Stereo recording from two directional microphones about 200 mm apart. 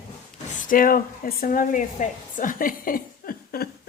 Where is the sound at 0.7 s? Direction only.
45° left (ahead or behind).